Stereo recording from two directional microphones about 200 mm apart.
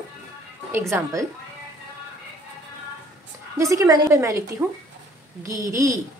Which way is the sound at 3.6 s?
15° right (ahead or behind).